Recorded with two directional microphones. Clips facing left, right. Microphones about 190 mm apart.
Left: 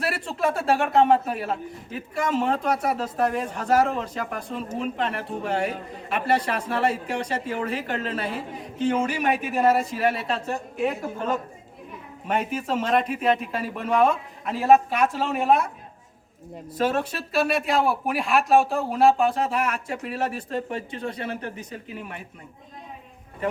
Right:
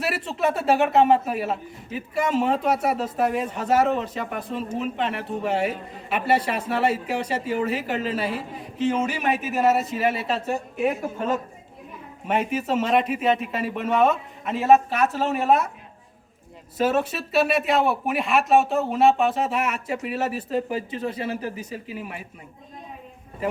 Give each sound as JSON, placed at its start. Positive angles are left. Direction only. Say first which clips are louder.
{"t": 0.3, "sound": "speech", "louder": "right 2 dB", "side_deg": 0}
{"t": 14.9, "sound": "speech", "louder": "right 1 dB", "side_deg": 15}
{"t": 15.4, "sound": "speech", "louder": "even", "side_deg": -5}
{"t": 16.7, "sound": "speech", "louder": "right 2 dB", "side_deg": -5}